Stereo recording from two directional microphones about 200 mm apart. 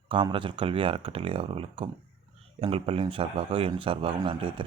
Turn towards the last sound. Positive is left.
turn(degrees=-25)  # may be behind; listen again after turning